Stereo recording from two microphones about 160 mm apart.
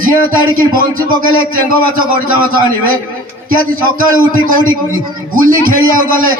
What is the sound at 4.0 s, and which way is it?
A man's voice, 60° right (ahead or behind).